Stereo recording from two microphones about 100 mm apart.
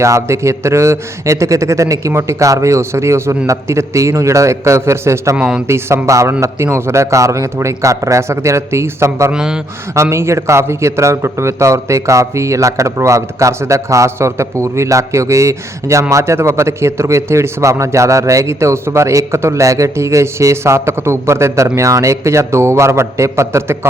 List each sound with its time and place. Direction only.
0.0 s a man's voice: 30° right (ahead or behind)
5.4 s speech: 10° right (ahead or behind)
5.6 s a man's voice: 30° right (ahead or behind)
9.3 s speech: 5° right (ahead or behind)
9.9 s a man's voice: 30° right (ahead or behind)